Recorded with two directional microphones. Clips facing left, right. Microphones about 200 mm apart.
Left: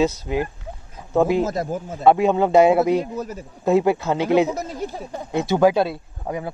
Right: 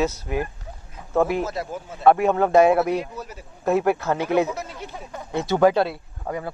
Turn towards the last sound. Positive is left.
turn(degrees=15)  # may be behind; listen again after turning